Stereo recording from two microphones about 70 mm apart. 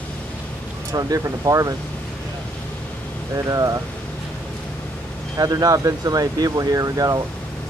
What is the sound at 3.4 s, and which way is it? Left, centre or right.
Speech, right.